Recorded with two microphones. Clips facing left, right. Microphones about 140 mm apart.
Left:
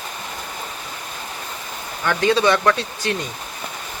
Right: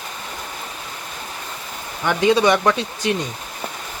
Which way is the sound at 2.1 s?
15° right (ahead or behind).